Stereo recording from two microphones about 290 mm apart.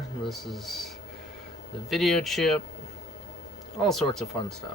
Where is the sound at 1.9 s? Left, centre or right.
Centre.